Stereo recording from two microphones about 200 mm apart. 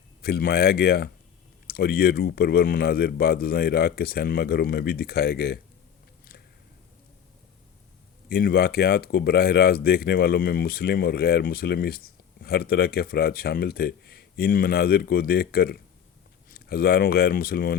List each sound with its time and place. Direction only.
0.2 s speech: 50° left (ahead or behind)
8.3 s speech: 50° left (ahead or behind)